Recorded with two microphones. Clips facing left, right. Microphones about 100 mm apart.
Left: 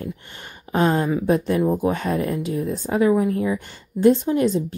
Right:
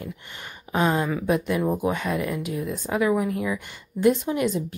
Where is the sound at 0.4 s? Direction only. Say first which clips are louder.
Left 3 dB; 35° left (ahead or behind).